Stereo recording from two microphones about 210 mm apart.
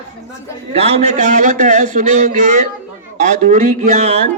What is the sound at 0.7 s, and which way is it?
A man's voice, 30° right (ahead or behind).